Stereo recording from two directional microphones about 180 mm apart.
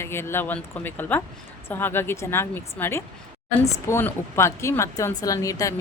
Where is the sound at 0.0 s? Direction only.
15° left (ahead or behind).